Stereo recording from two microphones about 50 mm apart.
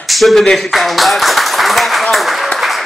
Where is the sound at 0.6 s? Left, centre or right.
Centre.